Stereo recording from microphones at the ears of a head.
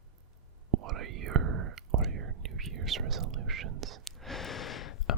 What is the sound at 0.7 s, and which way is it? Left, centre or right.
Whispering, right.